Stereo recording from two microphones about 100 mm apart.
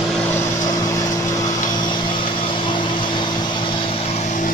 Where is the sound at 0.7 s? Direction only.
35° left (ahead or behind); by 4.2 s 75° left (ahead or behind).